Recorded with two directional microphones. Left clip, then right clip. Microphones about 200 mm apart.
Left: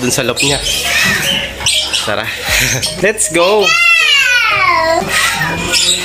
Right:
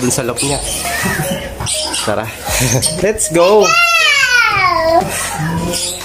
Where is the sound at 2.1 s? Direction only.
15° right (ahead or behind).